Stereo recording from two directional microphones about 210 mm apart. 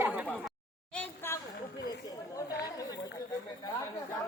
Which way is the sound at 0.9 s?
10° left (ahead or behind).